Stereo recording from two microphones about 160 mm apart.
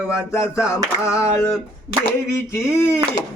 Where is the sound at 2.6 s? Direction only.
15° left (ahead or behind).